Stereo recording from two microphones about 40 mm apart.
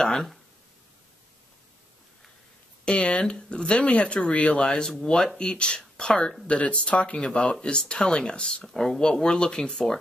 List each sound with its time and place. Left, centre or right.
0.0 s a sound: centre
3.0 s speech: left
5.0 s speech: centre
8.6 s speech: centre